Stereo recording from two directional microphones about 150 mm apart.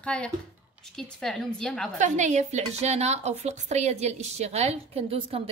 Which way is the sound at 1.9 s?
55° right (ahead or behind).